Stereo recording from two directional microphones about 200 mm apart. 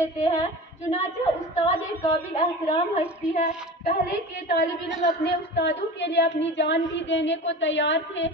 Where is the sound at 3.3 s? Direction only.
40° left (ahead or behind).